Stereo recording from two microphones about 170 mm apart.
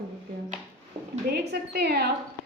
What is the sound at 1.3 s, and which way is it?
Speech, 70° right (ahead or behind).